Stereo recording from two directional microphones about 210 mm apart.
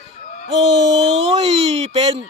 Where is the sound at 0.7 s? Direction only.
60° right (ahead or behind).